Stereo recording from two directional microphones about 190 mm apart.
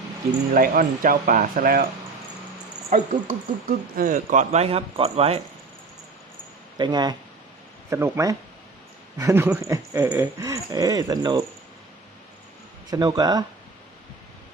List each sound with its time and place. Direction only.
0.5 s speech: 50° right (ahead or behind)
2.9 s speech: 45° right (ahead or behind)
6.7 s speech: 20° right (ahead or behind)
12.9 s speech: 20° right (ahead or behind)